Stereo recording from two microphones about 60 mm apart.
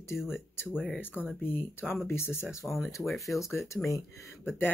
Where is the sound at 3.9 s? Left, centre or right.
Left.